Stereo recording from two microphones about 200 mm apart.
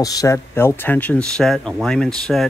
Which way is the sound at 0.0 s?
15° left (ahead or behind).